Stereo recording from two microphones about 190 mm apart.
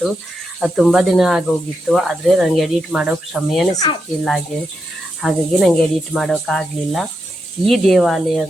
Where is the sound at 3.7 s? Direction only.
20° left (ahead or behind).